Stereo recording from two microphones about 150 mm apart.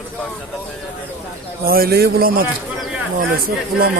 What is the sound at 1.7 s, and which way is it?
Speech, 80° right.